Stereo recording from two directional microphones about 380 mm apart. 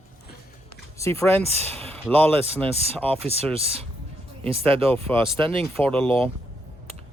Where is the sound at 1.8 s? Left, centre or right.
Centre.